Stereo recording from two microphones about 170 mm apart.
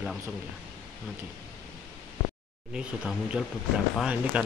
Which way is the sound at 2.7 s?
5° right (ahead or behind).